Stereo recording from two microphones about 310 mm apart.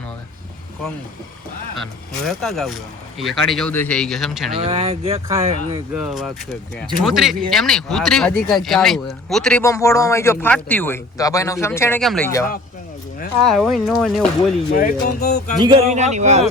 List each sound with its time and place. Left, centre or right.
1.8 s speech: centre
4.5 s cattle: centre
5.9 s speech: centre
14.8 s speech: left
15.6 s cattle: centre